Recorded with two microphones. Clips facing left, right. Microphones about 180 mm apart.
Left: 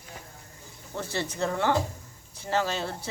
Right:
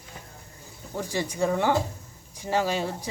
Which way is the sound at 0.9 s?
15° right (ahead or behind).